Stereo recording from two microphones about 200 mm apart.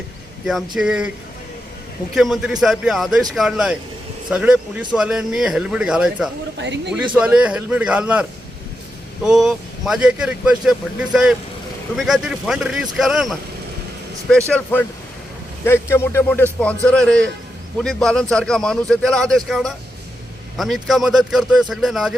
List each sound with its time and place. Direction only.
0.4 s speech: centre (ahead or behind)
2.1 s speech: centre (ahead or behind)
6.6 s speech: 60° right (ahead or behind)
6.9 s a man's voice: 5° right (ahead or behind)